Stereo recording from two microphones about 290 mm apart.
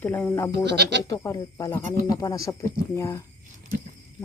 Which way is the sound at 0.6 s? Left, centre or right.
Right.